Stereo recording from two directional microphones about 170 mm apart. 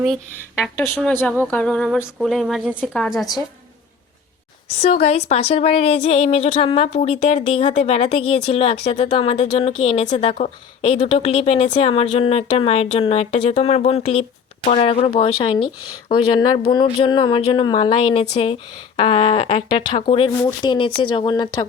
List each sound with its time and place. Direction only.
0.6 s a woman's voice: 10° left (ahead or behind)
4.7 s a woman's voice: 35° left (ahead or behind)
20.4 s speech: 25° left (ahead or behind)